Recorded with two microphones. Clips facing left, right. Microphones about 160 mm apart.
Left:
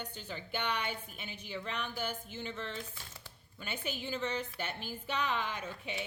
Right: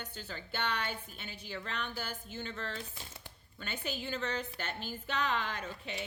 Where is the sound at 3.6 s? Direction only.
10° left (ahead or behind).